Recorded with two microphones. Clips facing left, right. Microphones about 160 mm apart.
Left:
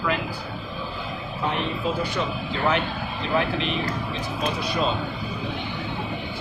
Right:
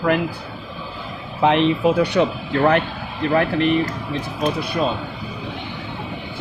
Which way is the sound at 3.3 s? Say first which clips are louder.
Right 7 dB; 55° right (ahead or behind).